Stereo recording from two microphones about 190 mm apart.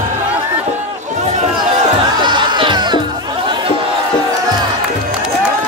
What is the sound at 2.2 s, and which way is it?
Music, 25° right (ahead or behind).